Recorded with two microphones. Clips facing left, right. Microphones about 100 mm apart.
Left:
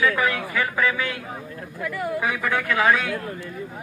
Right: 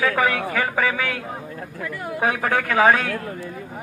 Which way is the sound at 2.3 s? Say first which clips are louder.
Right 6 dB; 45° right (ahead or behind).